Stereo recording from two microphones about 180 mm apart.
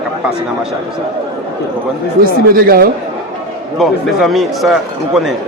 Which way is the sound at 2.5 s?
55° right (ahead or behind).